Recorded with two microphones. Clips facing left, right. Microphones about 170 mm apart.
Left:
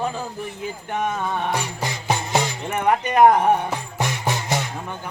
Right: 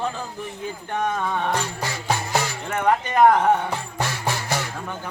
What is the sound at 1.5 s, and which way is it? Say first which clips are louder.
Speech: even; 15° left (ahead or behind).